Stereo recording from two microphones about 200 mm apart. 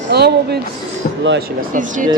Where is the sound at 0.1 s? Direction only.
55° right (ahead or behind).